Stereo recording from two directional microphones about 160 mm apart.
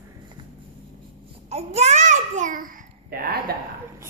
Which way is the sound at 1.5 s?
45° right (ahead or behind).